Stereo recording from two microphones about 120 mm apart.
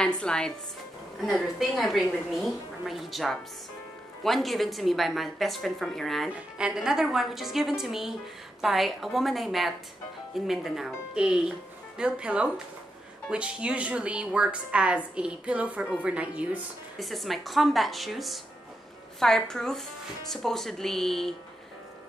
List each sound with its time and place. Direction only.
0.0 s a woman's voice: 10° left (ahead or behind)